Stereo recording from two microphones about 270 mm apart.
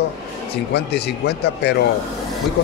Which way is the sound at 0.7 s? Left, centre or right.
Left.